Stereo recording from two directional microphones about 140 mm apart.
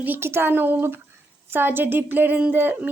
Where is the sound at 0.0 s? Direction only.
15° right (ahead or behind).